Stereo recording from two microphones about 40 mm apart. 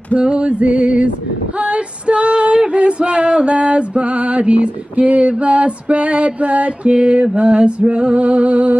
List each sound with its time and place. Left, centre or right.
0.2 s female singing: right